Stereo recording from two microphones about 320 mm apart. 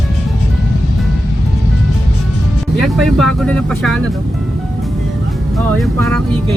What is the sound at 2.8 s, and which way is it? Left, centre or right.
Speech, centre.